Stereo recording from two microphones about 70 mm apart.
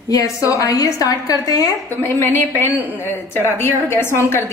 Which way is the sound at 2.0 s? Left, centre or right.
Left.